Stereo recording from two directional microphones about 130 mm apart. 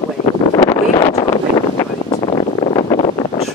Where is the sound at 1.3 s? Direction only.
25° left (ahead or behind).